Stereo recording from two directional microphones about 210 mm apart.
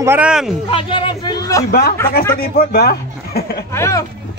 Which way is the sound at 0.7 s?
25° left (ahead or behind).